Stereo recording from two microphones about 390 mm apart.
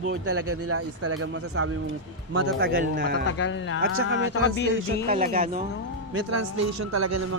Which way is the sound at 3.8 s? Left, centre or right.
Right.